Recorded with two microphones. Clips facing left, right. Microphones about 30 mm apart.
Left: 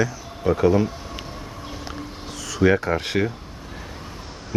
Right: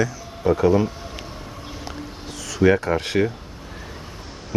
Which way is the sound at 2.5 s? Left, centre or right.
Centre.